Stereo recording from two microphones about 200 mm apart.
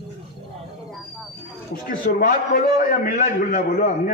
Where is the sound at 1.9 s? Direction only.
45° left (ahead or behind).